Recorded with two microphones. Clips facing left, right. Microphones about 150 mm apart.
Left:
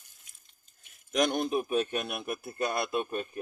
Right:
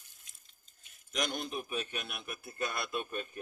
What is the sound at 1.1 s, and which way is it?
A man's voice, 55° left (ahead or behind).